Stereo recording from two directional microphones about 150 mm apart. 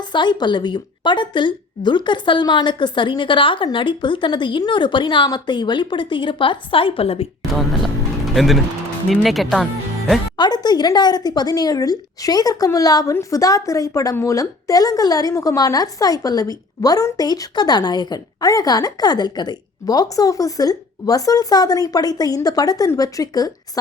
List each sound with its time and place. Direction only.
0.0 s a woman's voice: 30° left (ahead or behind)
7.5 s speech: centre (ahead or behind)
10.3 s speech: 30° left (ahead or behind)